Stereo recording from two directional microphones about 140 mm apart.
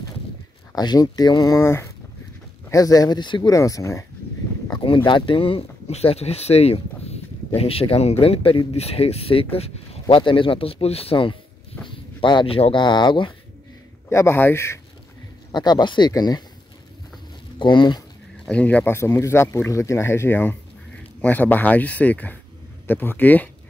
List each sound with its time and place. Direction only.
0.7 s speech: 30° left (ahead or behind)
3.5 s speech: 25° left (ahead or behind)
4.6 s speech: 35° left (ahead or behind)
14.0 s speech: 15° left (ahead or behind)
15.5 s speech: 30° left (ahead or behind)
17.6 s speech: 35° left (ahead or behind)
18.4 s speech: 10° left (ahead or behind)